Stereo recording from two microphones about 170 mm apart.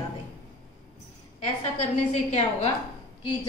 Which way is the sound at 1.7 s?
40° left (ahead or behind).